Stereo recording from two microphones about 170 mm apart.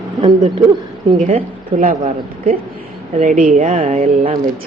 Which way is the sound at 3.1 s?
50° right (ahead or behind).